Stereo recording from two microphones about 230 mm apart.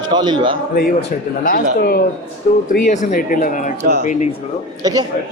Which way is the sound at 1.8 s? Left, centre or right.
Left.